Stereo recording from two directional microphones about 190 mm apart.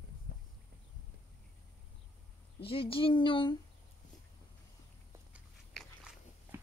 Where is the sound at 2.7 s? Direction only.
30° left (ahead or behind).